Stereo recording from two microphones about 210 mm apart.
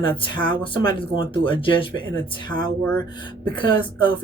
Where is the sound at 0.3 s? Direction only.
20° left (ahead or behind).